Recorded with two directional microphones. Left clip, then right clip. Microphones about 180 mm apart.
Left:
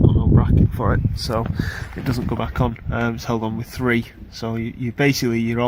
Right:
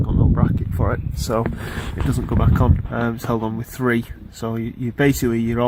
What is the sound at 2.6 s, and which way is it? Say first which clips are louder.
Speech: even; 10° right (ahead or behind).